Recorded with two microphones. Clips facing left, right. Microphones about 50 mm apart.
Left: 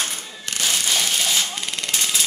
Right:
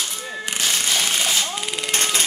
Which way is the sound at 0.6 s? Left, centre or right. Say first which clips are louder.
Even; centre.